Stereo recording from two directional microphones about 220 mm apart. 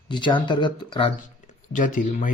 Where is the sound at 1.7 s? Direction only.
35° left (ahead or behind).